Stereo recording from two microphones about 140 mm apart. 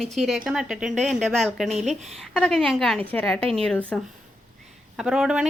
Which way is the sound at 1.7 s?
50° right (ahead or behind).